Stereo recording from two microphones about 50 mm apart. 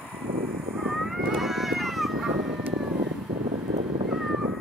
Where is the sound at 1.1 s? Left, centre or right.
Centre.